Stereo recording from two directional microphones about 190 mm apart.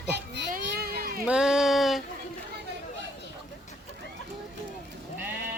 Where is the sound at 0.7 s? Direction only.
55° right (ahead or behind).